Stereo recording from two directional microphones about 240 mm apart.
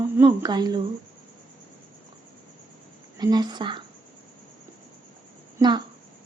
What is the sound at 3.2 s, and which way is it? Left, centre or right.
Speech, centre.